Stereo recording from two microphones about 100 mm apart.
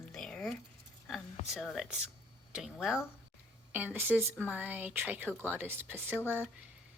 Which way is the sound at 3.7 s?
20° right (ahead or behind).